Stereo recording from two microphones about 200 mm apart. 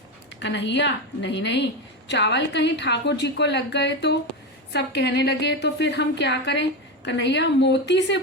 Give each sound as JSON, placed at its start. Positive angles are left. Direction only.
{"t": 0.3, "sound": "speech", "side_deg": 60}